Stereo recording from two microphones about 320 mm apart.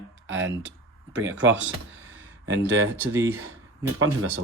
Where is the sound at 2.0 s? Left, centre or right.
Right.